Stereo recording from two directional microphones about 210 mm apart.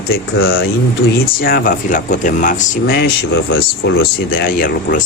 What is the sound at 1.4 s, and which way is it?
Speech, 45° left (ahead or behind).